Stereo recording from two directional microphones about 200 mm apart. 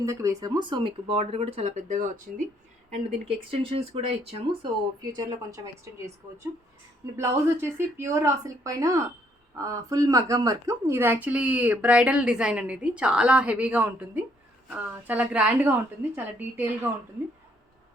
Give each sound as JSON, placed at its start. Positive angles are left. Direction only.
{"t": 0.0, "sound": "speech", "side_deg": -15}
{"t": 7.2, "sound": "speech", "side_deg": -15}